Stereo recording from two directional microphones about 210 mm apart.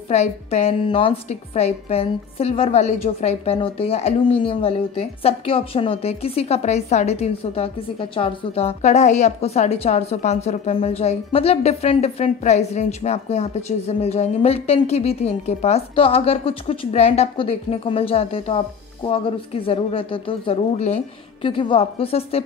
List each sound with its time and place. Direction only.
0.1 s a woman's voice: 30° left (ahead or behind)